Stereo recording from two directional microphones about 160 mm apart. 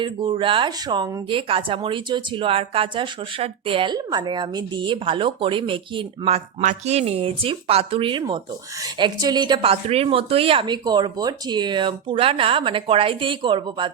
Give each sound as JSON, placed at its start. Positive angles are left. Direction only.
{"t": 0.0, "sound": "speech", "side_deg": -30}